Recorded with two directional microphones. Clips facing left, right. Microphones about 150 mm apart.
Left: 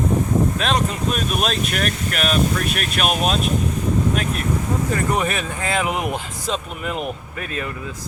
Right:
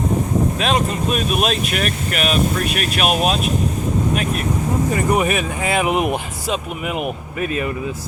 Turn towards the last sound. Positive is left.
turn(degrees=-20)  # may be behind; listen again after turning